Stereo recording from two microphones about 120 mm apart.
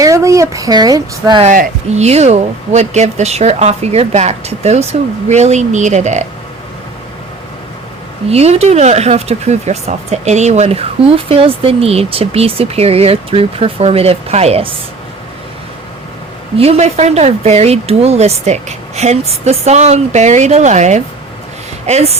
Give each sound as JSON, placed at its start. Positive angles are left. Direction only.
{"t": 0.0, "sound": "speech", "side_deg": -25}
{"t": 1.4, "sound": "speech", "side_deg": -70}
{"t": 8.3, "sound": "speech", "side_deg": -60}
{"t": 16.6, "sound": "speech", "side_deg": -60}
{"t": 21.8, "sound": "speech", "side_deg": -65}